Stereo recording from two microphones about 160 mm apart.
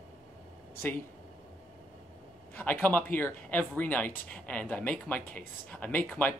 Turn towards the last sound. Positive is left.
turn(degrees=10)  # may be behind; listen again after turning